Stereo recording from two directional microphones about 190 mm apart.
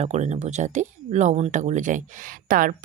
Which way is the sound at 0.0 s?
35° right (ahead or behind).